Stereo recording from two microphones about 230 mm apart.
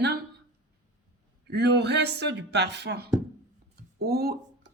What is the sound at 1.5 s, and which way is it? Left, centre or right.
A woman's voice, right.